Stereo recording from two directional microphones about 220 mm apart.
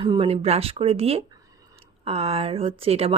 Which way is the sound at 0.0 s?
25° right (ahead or behind).